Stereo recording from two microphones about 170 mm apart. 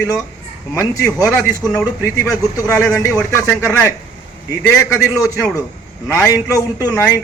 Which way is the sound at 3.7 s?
15° left (ahead or behind).